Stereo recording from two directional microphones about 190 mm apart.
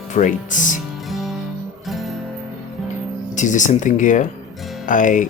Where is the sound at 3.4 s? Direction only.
40° left (ahead or behind).